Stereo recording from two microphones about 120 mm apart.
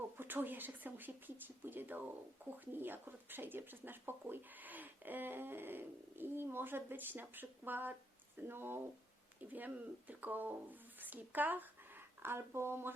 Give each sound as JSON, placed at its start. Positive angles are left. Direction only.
{"t": 0.2, "sound": "speech", "side_deg": -15}